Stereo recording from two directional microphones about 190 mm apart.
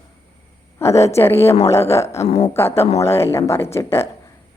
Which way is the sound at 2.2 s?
35° left (ahead or behind).